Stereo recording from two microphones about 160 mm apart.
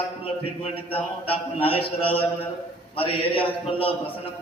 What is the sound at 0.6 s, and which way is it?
A man's voice, 35° left (ahead or behind).